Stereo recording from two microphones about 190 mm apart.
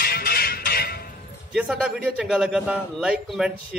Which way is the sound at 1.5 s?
5° right (ahead or behind).